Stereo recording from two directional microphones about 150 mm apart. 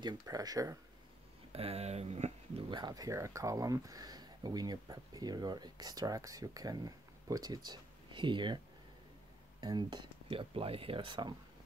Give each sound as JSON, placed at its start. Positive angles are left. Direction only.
{"t": 0.0, "sound": "speech", "side_deg": -25}
{"t": 1.5, "sound": "speech", "side_deg": -40}
{"t": 2.7, "sound": "speech", "side_deg": -25}
{"t": 9.6, "sound": "speech", "side_deg": -30}